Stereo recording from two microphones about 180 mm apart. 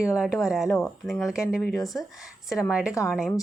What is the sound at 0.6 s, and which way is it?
Speech, 15° left (ahead or behind).